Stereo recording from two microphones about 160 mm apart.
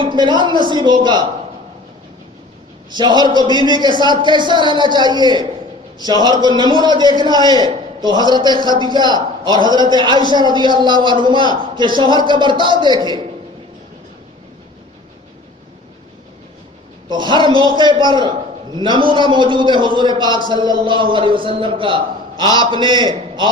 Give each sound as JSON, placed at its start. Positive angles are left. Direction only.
{"t": 0.0, "sound": "a man's voice", "side_deg": -30}
{"t": 2.9, "sound": "a man's voice", "side_deg": -25}
{"t": 17.1, "sound": "a man's voice", "side_deg": -30}